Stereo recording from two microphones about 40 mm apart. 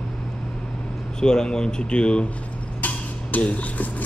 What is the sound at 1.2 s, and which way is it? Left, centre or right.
Speech, centre.